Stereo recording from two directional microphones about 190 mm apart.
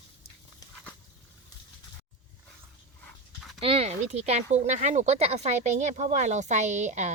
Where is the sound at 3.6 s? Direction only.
30° right (ahead or behind).